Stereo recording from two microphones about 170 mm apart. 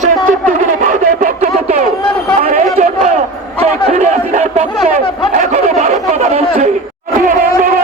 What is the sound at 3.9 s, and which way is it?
Chatter, 45° right (ahead or behind).